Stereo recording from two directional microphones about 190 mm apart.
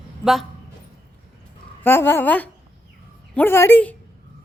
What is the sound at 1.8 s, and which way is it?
Speech, 10° left (ahead or behind).